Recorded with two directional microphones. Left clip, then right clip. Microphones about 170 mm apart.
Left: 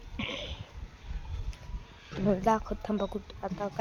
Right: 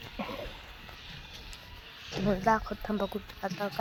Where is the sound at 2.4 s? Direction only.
20° left (ahead or behind).